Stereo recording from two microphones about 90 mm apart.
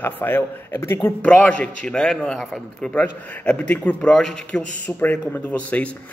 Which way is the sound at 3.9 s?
5° left (ahead or behind).